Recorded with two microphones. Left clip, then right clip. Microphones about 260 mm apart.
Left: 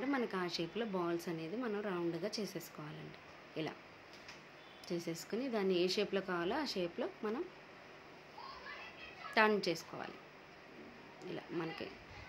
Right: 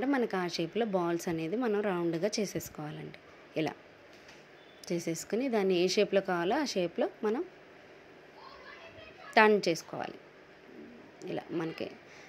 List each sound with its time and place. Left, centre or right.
0.0 s a woman's voice: right
4.8 s a woman's voice: right
9.3 s a woman's voice: right
11.1 s a woman's voice: right